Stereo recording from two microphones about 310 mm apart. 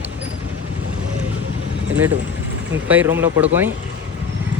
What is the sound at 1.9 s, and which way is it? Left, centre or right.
Speech, centre.